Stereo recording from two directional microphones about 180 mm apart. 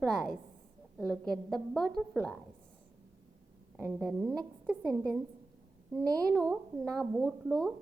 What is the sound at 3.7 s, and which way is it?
A woman's voice, 10° right (ahead or behind).